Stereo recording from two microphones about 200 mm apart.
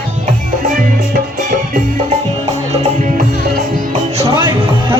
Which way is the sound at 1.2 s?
45° right (ahead or behind).